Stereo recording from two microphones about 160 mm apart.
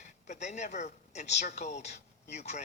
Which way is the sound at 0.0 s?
45° left (ahead or behind).